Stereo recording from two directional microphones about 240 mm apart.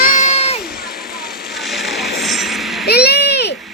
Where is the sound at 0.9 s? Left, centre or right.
Left.